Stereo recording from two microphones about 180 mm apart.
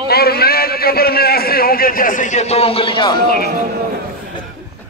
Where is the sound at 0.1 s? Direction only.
60° left (ahead or behind); by 3.2 s 25° left (ahead or behind).